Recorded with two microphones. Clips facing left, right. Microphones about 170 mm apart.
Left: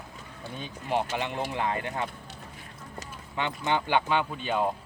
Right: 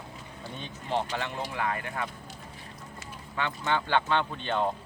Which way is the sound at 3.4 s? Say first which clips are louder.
Left 1 dB; 20° left (ahead or behind).